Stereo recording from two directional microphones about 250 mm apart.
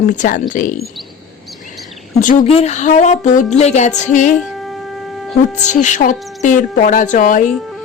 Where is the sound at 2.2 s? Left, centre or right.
Left.